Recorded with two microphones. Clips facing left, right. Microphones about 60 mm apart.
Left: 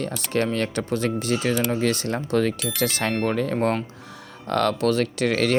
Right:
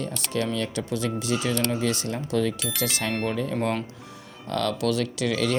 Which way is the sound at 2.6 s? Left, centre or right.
Centre.